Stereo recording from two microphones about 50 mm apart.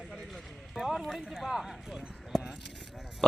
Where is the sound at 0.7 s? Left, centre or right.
Centre.